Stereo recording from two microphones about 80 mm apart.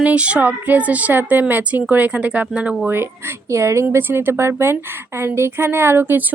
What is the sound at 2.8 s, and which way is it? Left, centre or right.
A woman's voice, right.